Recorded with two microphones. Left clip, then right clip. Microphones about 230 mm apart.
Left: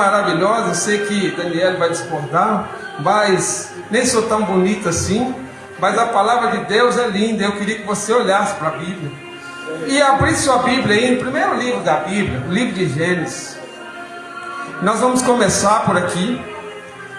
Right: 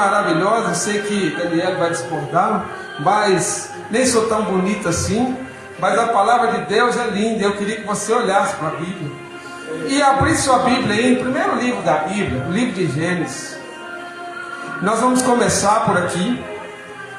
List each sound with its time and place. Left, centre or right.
0.0 s a man's voice: left
9.8 s a man's voice: left
14.8 s a man's voice: left